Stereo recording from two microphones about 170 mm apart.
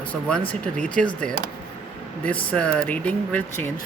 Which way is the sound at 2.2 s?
10° left (ahead or behind).